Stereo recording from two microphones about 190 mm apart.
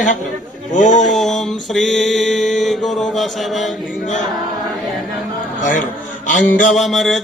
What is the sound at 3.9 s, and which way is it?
Speech, 40° left (ahead or behind).